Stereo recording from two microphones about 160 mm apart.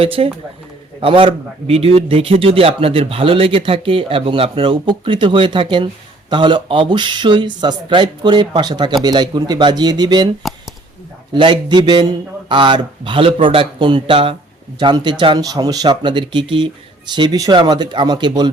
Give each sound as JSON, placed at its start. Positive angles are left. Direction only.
{"t": 0.0, "sound": "a man's voice", "side_deg": -35}
{"t": 10.4, "sound": "a sound", "side_deg": 0}
{"t": 11.3, "sound": "a man's voice", "side_deg": -30}